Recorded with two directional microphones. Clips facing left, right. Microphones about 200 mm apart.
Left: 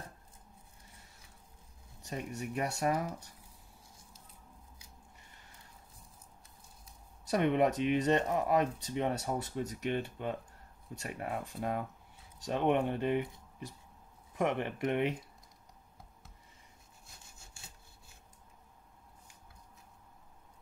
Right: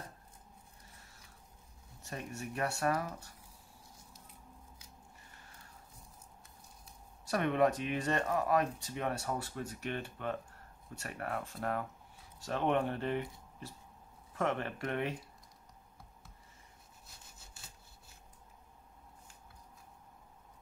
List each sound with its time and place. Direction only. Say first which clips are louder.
2.0 s speech: left 3 dB; 15° left (ahead or behind)
7.2 s speech: left 2 dB; 20° left (ahead or behind)